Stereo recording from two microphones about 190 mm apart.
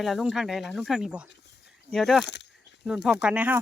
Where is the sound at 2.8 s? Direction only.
5° right (ahead or behind).